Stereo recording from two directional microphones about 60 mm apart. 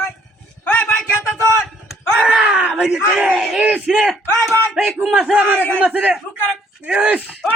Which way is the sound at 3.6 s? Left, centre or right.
Centre.